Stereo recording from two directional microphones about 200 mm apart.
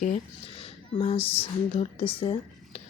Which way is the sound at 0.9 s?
30° left (ahead or behind).